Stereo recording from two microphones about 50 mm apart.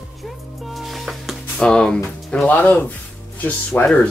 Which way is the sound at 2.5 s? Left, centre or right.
Left.